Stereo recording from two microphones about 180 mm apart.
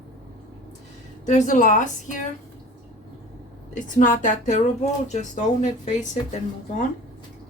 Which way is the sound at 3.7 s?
45° left (ahead or behind).